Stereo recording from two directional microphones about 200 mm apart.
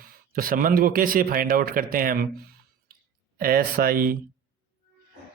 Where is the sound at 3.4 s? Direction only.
50° right (ahead or behind).